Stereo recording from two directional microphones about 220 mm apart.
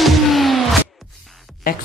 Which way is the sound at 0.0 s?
Centre (ahead or behind).